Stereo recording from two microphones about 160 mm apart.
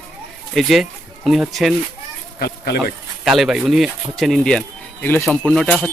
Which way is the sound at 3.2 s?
5° right (ahead or behind).